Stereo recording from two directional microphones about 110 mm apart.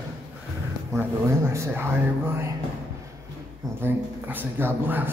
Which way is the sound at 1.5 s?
25° right (ahead or behind).